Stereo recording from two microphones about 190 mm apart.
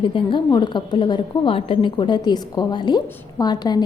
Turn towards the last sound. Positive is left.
turn(degrees=20)  # may be behind; listen again after turning